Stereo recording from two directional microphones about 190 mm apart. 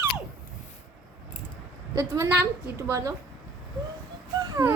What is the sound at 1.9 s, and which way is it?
A woman's voice, 15° right (ahead or behind).